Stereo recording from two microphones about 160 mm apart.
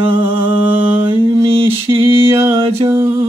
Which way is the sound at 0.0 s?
15° right (ahead or behind).